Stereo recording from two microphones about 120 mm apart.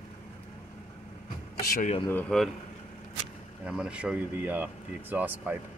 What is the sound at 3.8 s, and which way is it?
Speech, 10° right (ahead or behind).